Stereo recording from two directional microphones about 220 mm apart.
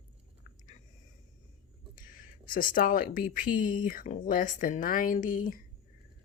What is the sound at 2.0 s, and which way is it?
Speech, 40° left (ahead or behind).